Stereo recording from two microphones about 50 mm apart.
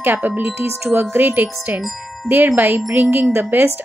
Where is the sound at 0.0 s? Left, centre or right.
Right.